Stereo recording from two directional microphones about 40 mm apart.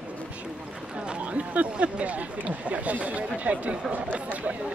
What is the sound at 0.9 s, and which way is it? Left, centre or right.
Speech, right.